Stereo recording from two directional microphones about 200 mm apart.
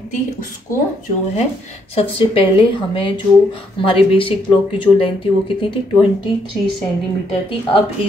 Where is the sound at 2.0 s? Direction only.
25° left (ahead or behind).